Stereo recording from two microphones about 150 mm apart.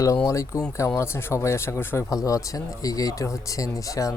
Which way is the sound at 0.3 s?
20° left (ahead or behind).